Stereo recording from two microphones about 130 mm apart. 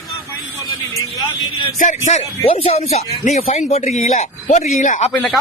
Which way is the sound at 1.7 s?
75° left (ahead or behind).